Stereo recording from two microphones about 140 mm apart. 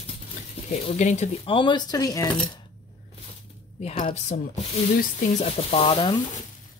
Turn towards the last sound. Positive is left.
turn(degrees=35)  # may be behind; listen again after turning